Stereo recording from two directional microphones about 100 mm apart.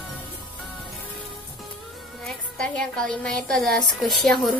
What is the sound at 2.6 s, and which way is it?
A woman's voice, 10° left (ahead or behind).